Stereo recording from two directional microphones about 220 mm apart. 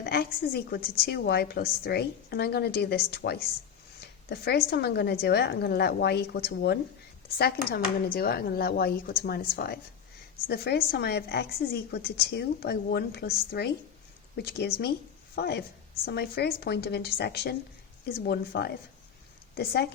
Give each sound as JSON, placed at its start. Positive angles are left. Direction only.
{"t": 0.0, "sound": "a woman's voice", "side_deg": 45}